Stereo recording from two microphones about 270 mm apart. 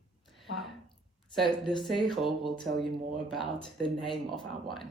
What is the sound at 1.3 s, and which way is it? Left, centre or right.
Speech, centre.